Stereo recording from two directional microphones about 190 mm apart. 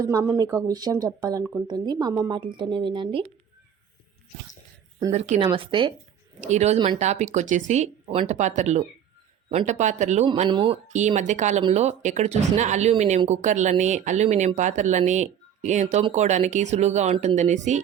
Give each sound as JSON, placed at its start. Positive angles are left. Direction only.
{"t": 0.0, "sound": "speech", "side_deg": -15}
{"t": 5.1, "sound": "a woman's voice", "side_deg": -35}
{"t": 10.8, "sound": "a woman's voice", "side_deg": -40}